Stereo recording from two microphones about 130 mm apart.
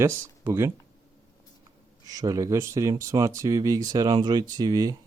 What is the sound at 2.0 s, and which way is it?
Speech, 30° right (ahead or behind).